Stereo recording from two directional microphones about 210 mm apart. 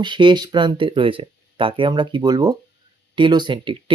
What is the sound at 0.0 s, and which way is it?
Speech, 20° right (ahead or behind).